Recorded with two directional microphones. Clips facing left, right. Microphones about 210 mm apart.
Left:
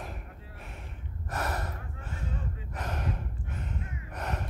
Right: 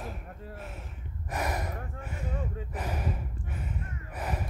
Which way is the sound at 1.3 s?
10° right (ahead or behind).